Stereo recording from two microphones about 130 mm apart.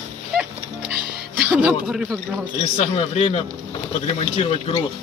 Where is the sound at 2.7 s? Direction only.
50° left (ahead or behind).